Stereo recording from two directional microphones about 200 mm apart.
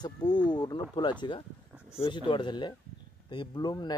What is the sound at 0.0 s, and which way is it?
Speech, 20° left (ahead or behind).